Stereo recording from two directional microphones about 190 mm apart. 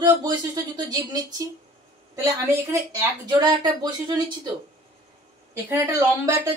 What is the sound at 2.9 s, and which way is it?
Speech, 20° right (ahead or behind).